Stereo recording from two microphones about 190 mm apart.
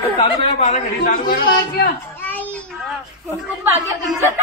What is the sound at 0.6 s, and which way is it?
Speech, 40° left (ahead or behind).